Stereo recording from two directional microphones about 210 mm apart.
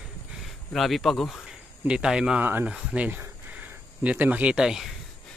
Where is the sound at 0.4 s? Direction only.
Centre (ahead or behind).